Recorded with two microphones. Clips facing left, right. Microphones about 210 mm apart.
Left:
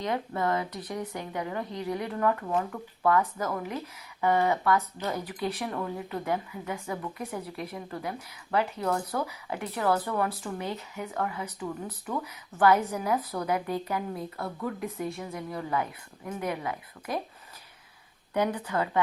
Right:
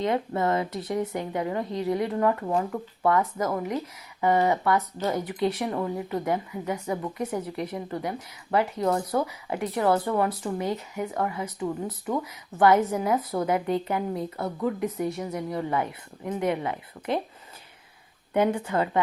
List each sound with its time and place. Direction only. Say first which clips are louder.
0.0 s speech: right 4 dB; 20° right (ahead or behind)
15.2 s a woman's voice: right 5 dB; 40° right (ahead or behind)
15.5 s speech: right 2 dB; 25° right (ahead or behind)
18.3 s speech: right 4 dB; 25° right (ahead or behind)